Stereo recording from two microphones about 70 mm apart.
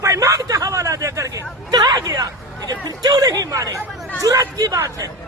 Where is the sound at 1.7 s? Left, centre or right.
Right.